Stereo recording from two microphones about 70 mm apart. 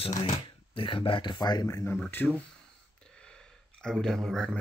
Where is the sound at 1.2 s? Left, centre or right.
Left.